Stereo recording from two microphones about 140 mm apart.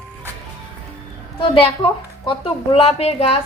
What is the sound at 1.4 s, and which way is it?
A woman's voice, 40° left (ahead or behind).